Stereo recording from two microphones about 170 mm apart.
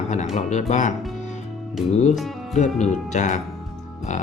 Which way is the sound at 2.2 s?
Centre (ahead or behind).